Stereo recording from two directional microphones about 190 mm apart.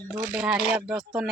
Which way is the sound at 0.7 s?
5° right (ahead or behind).